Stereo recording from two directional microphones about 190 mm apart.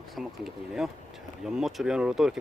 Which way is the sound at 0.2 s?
Centre (ahead or behind).